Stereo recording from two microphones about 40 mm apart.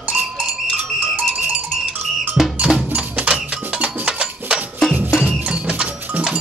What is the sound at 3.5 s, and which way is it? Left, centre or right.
Music, right.